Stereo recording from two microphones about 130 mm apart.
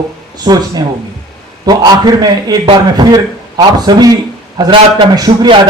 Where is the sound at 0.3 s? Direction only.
30° right (ahead or behind).